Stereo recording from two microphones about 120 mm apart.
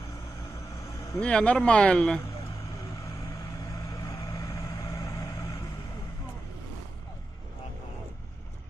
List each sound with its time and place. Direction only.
1.2 s speech: 10° left (ahead or behind)
3.3 s vehicle: 30° left (ahead or behind)